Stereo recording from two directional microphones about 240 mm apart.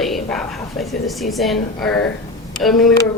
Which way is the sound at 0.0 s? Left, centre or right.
Centre.